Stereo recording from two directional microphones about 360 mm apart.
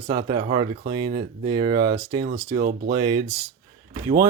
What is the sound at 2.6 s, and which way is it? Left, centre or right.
Speech, right.